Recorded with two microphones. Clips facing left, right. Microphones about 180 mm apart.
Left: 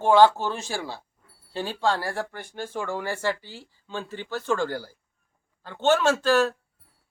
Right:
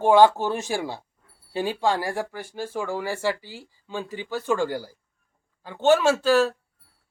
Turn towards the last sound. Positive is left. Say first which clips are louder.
# right 2 dB
turn(degrees=-5)  # may be behind; listen again after turning